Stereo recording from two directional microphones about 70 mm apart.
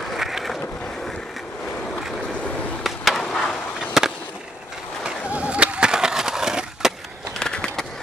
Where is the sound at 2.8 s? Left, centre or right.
Centre.